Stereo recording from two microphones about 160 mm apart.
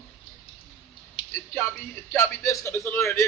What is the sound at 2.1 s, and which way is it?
A man's voice, 15° left (ahead or behind).